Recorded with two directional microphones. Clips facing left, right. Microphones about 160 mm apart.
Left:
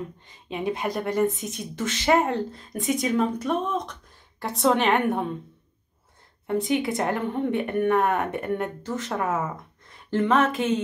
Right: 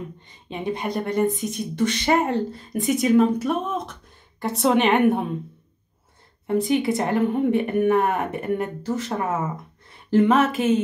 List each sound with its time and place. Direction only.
0.5 s speech: 5° left (ahead or behind)
6.4 s speech: centre (ahead or behind)
9.8 s music: centre (ahead or behind)
10.2 s speech: 5° right (ahead or behind)